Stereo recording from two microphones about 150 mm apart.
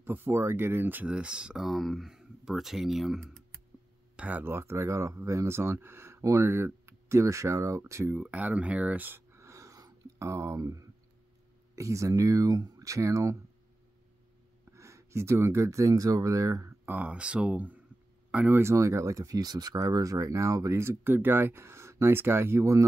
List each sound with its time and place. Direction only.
0.0 s speech: 15° right (ahead or behind)
4.2 s speech: 10° right (ahead or behind)
14.7 s speech: 20° right (ahead or behind)